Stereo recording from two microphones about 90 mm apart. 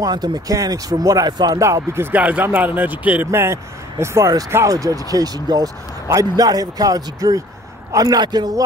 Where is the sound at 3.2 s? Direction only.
30° right (ahead or behind).